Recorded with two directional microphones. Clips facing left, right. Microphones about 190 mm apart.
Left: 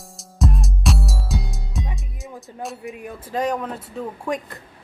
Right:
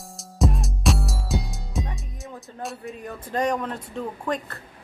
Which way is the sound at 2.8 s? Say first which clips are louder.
Left 1 dB; 10° left (ahead or behind).